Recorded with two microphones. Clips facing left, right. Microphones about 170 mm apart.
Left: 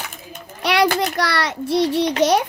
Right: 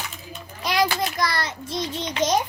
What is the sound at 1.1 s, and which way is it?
A child's voice, 70° left (ahead or behind).